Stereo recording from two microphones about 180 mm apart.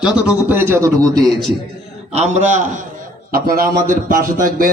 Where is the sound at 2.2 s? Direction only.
40° right (ahead or behind).